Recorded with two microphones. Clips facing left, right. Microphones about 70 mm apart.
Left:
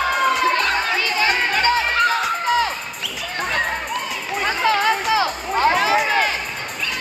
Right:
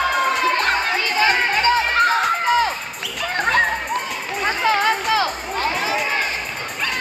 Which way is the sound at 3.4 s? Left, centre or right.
Right.